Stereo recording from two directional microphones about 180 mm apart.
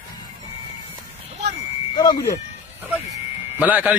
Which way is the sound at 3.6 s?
10° right (ahead or behind).